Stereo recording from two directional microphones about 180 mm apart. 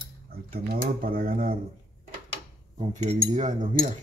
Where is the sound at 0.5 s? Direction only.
55° right (ahead or behind).